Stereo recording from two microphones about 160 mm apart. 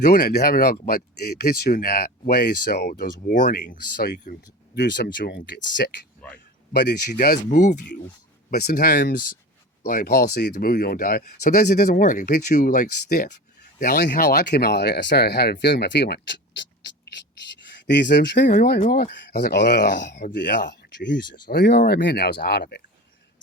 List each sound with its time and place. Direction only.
0.1 s speech: 70° left (ahead or behind)
3.2 s speech: 60° left (ahead or behind)
4.7 s speech: 80° left; by 7.8 s 55° left (ahead or behind)
8.4 s speech: 70° left (ahead or behind)
11.9 s speech: 50° left (ahead or behind); by 16.6 s 90° left
17.8 s speech: 90° left
18.4 s speech: 55° left (ahead or behind)
19.1 s speech: 90° left
21.4 s speech: 70° left (ahead or behind); by 22.8 s 90° left